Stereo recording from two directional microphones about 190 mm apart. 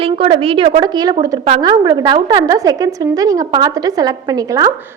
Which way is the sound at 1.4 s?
30° right (ahead or behind).